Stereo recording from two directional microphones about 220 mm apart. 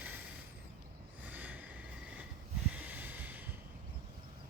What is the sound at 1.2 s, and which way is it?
Vehicle, 5° right (ahead or behind).